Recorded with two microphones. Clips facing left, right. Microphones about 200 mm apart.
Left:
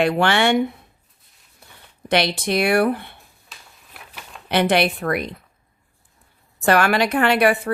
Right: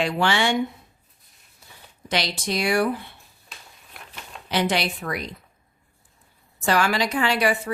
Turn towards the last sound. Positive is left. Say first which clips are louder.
# left 5 dB
turn(degrees=60)  # may be behind; listen again after turning